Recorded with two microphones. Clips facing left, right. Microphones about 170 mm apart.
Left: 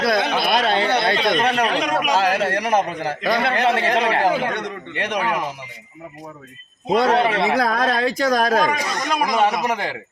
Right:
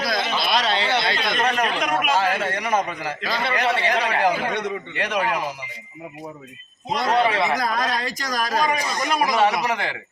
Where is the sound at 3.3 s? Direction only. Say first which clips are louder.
Left 4 dB; 60° left (ahead or behind); by 4.3 s 45° left (ahead or behind).